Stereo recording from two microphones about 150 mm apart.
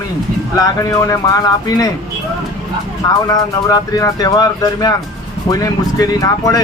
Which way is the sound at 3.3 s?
25° left (ahead or behind).